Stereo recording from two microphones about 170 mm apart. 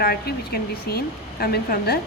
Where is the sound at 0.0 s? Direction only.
60° left (ahead or behind).